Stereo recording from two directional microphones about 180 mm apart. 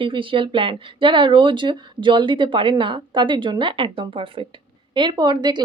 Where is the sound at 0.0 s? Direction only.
30° right (ahead or behind).